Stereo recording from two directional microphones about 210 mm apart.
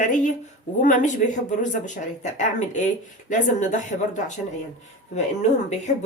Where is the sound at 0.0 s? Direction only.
35° left (ahead or behind).